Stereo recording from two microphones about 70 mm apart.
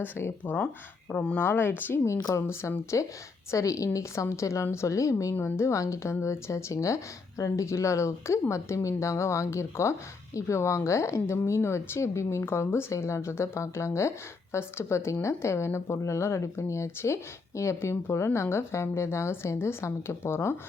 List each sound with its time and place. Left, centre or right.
0.0 s speech: left
1.1 s speech: centre
1.4 s speech: left
2.3 s speech: left
5.3 s speech: left